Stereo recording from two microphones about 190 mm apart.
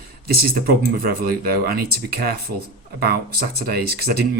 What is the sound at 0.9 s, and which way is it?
Speech, 50° right (ahead or behind).